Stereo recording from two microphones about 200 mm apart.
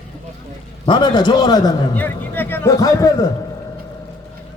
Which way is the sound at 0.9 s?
20° left (ahead or behind).